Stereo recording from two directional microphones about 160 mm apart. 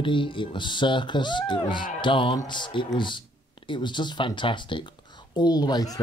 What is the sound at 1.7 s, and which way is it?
Speech, 60° left (ahead or behind).